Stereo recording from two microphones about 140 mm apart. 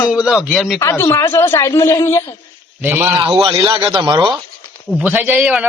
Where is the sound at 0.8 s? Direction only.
20° left (ahead or behind).